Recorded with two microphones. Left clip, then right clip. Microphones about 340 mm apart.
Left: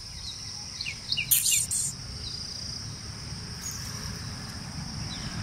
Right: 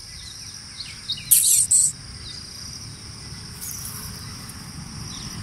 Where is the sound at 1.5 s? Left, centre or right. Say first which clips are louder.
Right 7 dB; centre.